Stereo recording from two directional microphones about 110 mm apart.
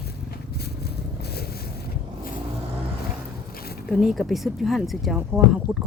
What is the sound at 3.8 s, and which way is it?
Speech, 5° right (ahead or behind).